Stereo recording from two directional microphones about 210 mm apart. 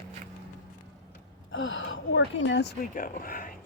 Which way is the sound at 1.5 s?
65° left (ahead or behind).